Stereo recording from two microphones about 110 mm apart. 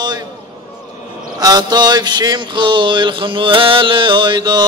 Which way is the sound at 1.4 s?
40° right (ahead or behind).